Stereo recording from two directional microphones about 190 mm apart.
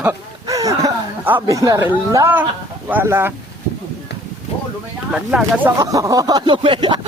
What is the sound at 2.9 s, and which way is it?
Speech, 10° right (ahead or behind).